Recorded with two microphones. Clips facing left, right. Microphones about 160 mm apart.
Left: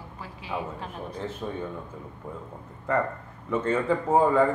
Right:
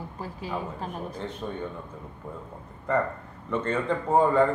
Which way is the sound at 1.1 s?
5° left (ahead or behind).